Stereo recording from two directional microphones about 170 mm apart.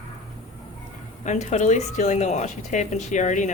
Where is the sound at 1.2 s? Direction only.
40° left (ahead or behind).